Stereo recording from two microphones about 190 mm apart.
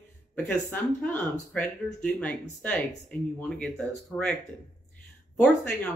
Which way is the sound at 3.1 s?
5° left (ahead or behind).